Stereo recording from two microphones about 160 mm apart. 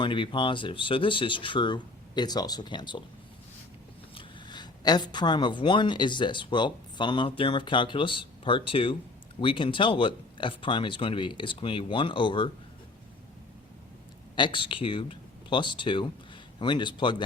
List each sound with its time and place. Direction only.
0.0 s speech: 30° left (ahead or behind)
4.1 s speech: 30° left (ahead or behind)
14.3 s a man's voice: 30° left (ahead or behind)